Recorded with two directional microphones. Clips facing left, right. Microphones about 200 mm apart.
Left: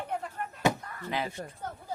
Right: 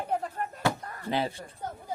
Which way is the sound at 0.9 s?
30° right (ahead or behind).